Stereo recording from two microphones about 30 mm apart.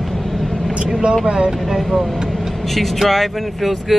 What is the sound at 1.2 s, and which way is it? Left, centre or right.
Speech, right.